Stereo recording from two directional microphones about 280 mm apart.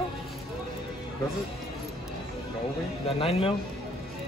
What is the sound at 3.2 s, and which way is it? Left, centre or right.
Speech, centre.